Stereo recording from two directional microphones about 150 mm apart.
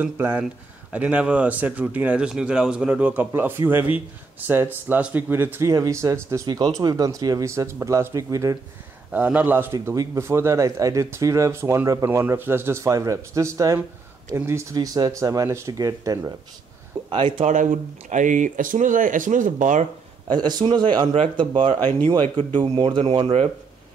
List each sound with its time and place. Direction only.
0.0 s speech: 10° right (ahead or behind)
9.1 s speech: 10° right (ahead or behind)
17.1 s speech: 35° right (ahead or behind)
17.5 s speech: 55° right (ahead or behind)
20.2 s speech: 30° right (ahead or behind)
21.7 s speech: 10° left (ahead or behind)
22.4 s speech: 30° right (ahead or behind)